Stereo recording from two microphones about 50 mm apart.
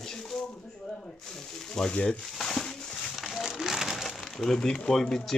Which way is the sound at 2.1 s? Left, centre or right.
Centre.